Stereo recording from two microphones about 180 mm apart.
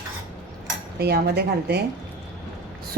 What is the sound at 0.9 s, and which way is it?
Speech, 65° right (ahead or behind).